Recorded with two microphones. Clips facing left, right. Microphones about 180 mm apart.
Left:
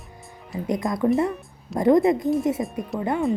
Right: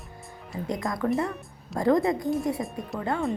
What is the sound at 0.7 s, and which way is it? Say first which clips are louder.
A woman's voice: left 5 dB; 20° left (ahead or behind).